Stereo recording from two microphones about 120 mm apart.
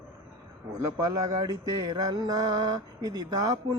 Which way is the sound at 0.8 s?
30° right (ahead or behind).